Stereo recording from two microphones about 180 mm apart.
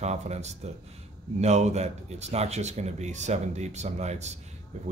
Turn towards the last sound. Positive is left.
turn(degrees=-40)  # may be behind; listen again after turning